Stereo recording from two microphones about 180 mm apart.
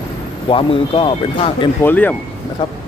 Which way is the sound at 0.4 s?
30° left (ahead or behind).